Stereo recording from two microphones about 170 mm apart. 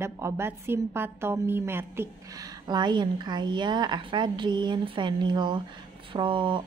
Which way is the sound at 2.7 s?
25° right (ahead or behind).